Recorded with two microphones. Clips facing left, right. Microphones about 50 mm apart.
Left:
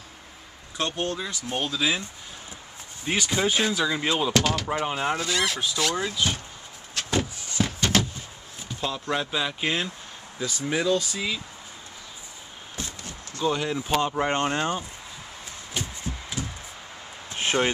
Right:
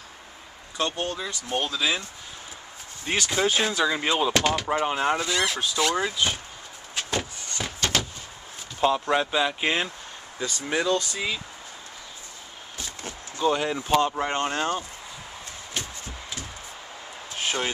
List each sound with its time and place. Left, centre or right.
0.7 s speech: centre
3.1 s speech: centre
7.1 s a sound: centre
8.8 s speech: centre
13.4 s speech: centre
17.4 s a sound: left